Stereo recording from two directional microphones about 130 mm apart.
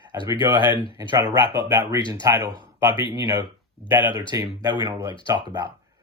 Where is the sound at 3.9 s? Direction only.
15° right (ahead or behind).